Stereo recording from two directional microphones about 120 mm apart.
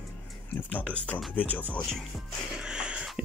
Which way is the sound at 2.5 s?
10° right (ahead or behind).